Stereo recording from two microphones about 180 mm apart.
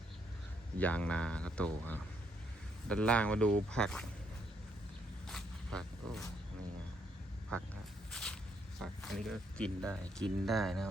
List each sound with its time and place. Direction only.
0.8 s speech: 10° left (ahead or behind)
5.3 s a sound: centre (ahead or behind)
8.1 s walk: 5° left (ahead or behind)
8.8 s speech: centre (ahead or behind)